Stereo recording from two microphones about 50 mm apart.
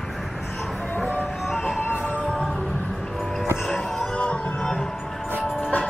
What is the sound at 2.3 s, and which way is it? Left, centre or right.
Music, centre.